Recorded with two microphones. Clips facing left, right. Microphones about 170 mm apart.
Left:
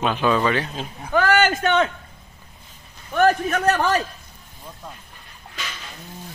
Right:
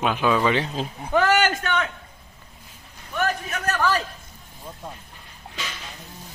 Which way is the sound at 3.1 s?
50° left (ahead or behind).